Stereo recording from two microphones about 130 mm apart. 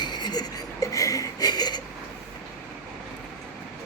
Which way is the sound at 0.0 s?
35° left (ahead or behind).